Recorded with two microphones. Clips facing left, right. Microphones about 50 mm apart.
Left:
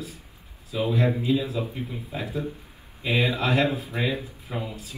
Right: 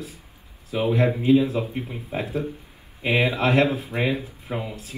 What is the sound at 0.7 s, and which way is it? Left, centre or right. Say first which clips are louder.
Speech: right 3 dB; right.